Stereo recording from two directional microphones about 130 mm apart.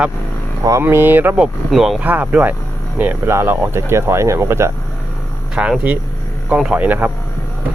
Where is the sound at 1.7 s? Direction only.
Centre (ahead or behind); by 4.7 s 20° right (ahead or behind).